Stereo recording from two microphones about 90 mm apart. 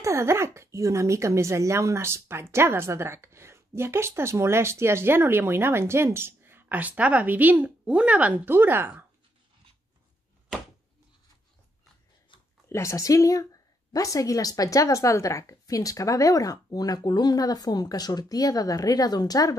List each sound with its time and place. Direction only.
0.0 s speech: 30° right (ahead or behind)
12.6 s a woman's voice: 30° left (ahead or behind)